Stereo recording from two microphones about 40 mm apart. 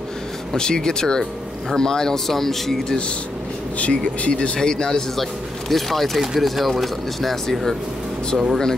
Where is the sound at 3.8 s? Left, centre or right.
Left.